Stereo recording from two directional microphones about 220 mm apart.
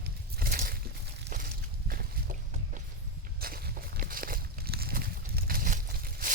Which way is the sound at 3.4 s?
40° right (ahead or behind).